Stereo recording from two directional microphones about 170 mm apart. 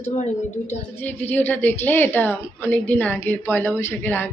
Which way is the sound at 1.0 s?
10° left (ahead or behind).